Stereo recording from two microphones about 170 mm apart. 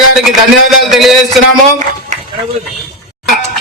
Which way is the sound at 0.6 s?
Centre (ahead or behind).